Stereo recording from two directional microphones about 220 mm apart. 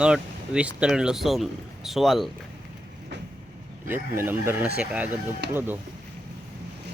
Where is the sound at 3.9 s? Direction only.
10° right (ahead or behind).